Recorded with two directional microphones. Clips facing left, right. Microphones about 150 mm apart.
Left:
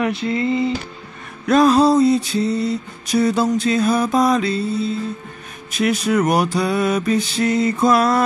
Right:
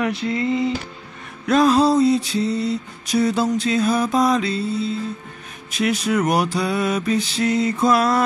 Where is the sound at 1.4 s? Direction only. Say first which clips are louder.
Left 2 dB; 45° left (ahead or behind).